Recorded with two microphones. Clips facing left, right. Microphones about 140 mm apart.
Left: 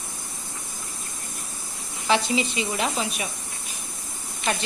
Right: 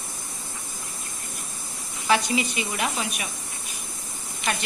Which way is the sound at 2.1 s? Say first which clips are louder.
Even; 25° left (ahead or behind).